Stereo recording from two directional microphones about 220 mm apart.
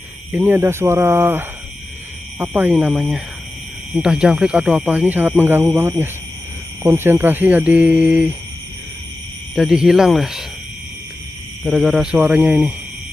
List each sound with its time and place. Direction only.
0.3 s speech: 10° right (ahead or behind)
9.6 s speech: centre (ahead or behind)
11.6 s speech: centre (ahead or behind)